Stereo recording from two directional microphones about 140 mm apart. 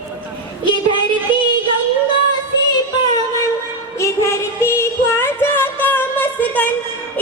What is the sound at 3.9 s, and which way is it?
Music, 20° left (ahead or behind).